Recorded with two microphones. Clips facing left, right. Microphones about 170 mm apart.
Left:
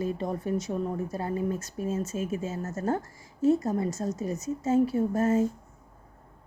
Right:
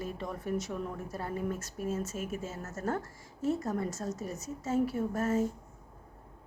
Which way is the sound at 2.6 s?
30° left (ahead or behind).